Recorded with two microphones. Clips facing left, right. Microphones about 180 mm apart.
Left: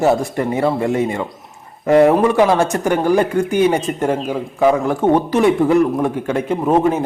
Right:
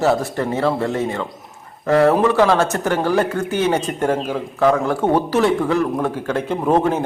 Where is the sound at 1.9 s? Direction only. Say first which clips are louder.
Left 3 dB; 20° left (ahead or behind).